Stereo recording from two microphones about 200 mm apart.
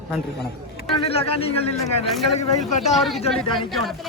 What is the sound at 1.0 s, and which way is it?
Speech, 30° left (ahead or behind).